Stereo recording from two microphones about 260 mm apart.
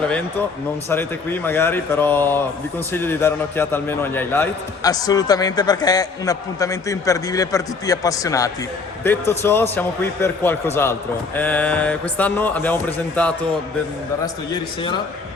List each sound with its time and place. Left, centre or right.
0.9 s a man's voice: centre
14.5 s a man's voice: centre